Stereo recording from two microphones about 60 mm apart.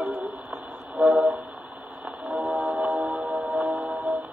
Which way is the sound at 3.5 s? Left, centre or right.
Right.